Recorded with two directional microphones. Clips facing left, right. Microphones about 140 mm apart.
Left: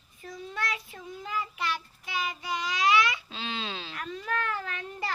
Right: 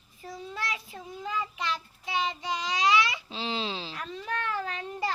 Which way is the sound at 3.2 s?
25° right (ahead or behind).